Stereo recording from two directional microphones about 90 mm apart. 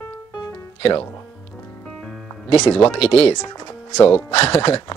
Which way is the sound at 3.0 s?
90° left.